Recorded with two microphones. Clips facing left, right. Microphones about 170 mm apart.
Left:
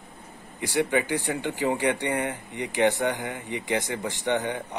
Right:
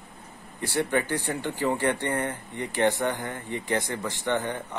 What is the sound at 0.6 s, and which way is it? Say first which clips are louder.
Speech: left 1 dB; 15° left (ahead or behind).